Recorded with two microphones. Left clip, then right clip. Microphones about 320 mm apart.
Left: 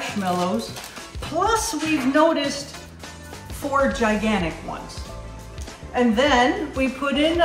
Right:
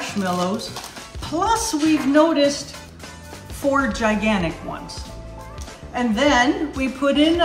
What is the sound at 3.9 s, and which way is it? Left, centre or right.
Speech, centre.